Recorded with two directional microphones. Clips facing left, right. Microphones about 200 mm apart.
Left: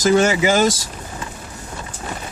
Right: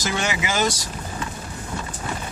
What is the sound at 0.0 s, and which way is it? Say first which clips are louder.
Speech: left 11 dB; 45° left (ahead or behind).